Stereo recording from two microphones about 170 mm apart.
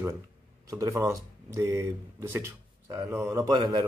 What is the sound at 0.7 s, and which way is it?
Speech, 20° right (ahead or behind).